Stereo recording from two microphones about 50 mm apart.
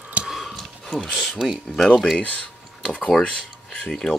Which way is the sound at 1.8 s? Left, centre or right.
Centre.